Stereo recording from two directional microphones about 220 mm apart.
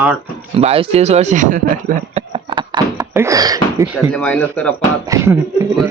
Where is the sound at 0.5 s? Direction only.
25° right (ahead or behind).